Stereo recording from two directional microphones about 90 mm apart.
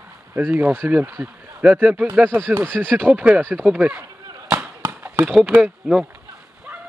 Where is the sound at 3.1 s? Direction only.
15° right (ahead or behind).